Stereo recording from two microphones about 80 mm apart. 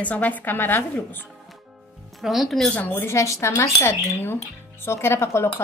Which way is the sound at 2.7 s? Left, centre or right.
Left.